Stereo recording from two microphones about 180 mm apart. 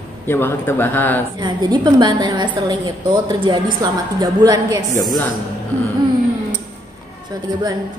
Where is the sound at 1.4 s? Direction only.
25° right (ahead or behind).